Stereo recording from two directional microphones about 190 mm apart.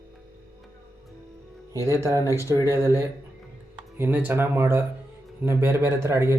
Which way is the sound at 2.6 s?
15° right (ahead or behind).